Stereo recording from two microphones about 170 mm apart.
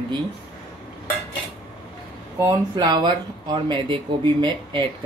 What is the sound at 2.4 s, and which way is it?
Speech, 25° right (ahead or behind).